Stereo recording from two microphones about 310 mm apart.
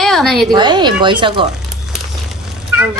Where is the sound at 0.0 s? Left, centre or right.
Centre.